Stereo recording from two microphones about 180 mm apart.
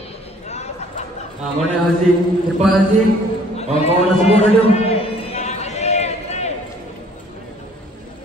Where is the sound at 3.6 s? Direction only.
35° left (ahead or behind).